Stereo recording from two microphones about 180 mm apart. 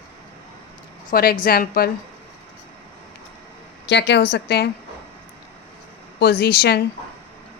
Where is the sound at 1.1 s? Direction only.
55° left (ahead or behind).